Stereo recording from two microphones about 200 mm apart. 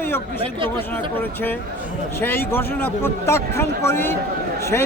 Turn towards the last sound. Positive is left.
turn(degrees=10)  # may be behind; listen again after turning